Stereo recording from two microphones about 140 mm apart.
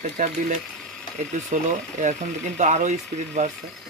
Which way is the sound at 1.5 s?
65° right (ahead or behind).